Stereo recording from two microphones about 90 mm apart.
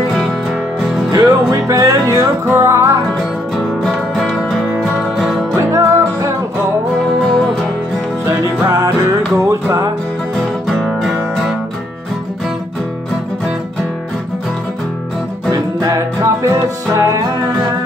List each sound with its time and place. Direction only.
1.1 s music: 35° right (ahead or behind)
3.5 s music: 5° left (ahead or behind)
5.6 s music: 35° right (ahead or behind)
8.3 s music: 35° right (ahead or behind)
10.3 s music: 5° left (ahead or behind)
15.5 s music: 40° right (ahead or behind)